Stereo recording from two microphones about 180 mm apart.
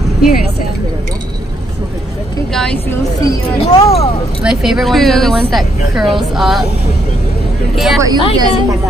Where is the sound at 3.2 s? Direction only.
20° left (ahead or behind).